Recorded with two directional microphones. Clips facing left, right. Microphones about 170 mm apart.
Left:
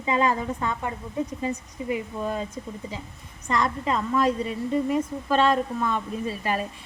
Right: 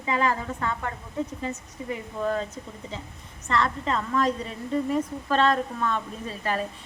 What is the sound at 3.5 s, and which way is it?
A woman's voice, 10° left (ahead or behind).